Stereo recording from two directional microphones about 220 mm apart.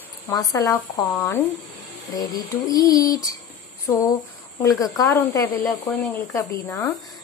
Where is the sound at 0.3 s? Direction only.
15° left (ahead or behind).